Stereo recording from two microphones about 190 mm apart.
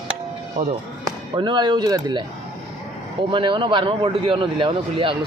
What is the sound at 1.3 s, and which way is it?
Speech, 25° right (ahead or behind).